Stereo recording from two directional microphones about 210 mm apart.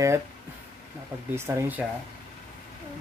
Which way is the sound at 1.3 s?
10° right (ahead or behind).